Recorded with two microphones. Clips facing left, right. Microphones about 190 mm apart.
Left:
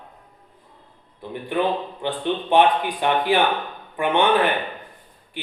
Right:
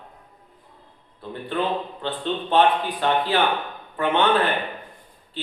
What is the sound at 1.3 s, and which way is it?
A man's voice, 15° left (ahead or behind).